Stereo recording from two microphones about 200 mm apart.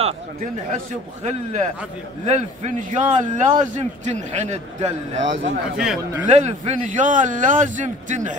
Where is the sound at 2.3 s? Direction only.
35° right (ahead or behind).